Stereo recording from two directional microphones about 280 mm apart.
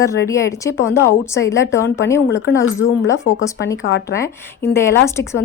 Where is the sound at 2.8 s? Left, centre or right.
Left.